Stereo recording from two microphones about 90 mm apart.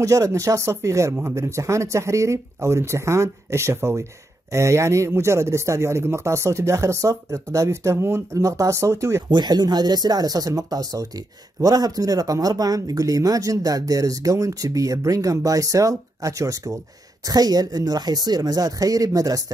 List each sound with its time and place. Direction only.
0.0 s speech: 35° right (ahead or behind)
9.3 s speech: 50° right (ahead or behind)